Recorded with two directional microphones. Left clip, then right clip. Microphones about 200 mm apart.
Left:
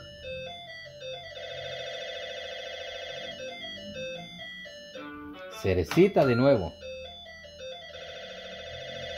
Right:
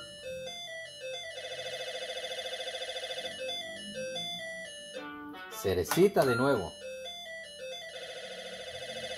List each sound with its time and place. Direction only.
5.6 s speech: 35° left (ahead or behind)